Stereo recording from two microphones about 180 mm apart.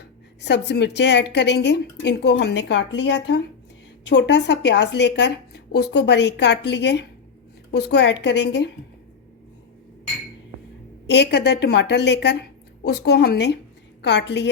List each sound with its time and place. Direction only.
0.0 s a woman's voice: 70° left (ahead or behind)
11.0 s a woman's voice: 70° left (ahead or behind)